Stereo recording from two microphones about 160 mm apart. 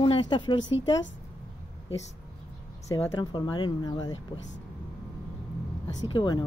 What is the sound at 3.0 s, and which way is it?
Speech, 30° left (ahead or behind).